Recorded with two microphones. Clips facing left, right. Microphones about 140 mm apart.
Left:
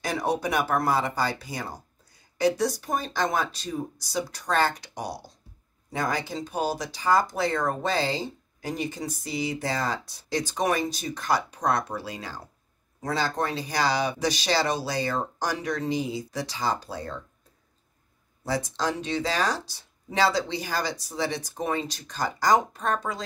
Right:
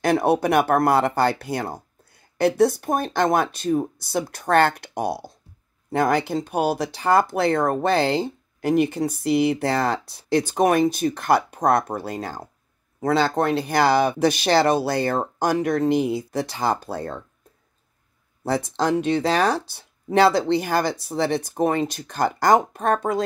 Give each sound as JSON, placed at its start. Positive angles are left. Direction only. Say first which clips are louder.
{"t": 0.0, "sound": "speech", "louder": "right 8 dB", "side_deg": -60}
{"t": 13.0, "sound": "speech", "louder": "right 7 dB", "side_deg": -65}
{"t": 18.4, "sound": "speech", "louder": "right 5 dB", "side_deg": -55}